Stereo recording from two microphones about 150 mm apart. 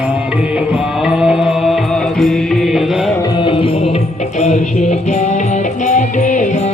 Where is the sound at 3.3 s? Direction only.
35° left (ahead or behind).